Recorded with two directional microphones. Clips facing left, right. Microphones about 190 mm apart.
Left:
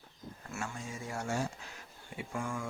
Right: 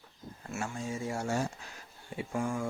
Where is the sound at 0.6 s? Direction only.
30° right (ahead or behind).